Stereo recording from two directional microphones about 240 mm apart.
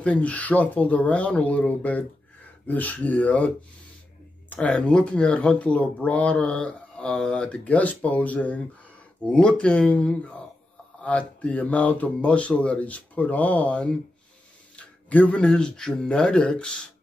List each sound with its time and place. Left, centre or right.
0.0 s speech: centre